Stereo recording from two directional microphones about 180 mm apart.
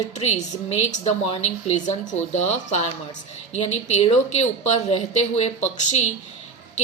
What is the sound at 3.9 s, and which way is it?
A woman's voice, 35° left (ahead or behind).